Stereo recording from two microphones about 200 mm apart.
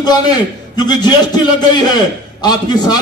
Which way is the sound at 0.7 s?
20° left (ahead or behind).